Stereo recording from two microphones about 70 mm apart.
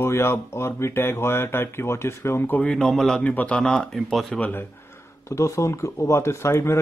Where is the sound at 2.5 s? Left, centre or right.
Centre.